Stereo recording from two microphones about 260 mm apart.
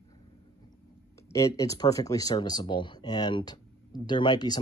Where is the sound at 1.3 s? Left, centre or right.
Centre.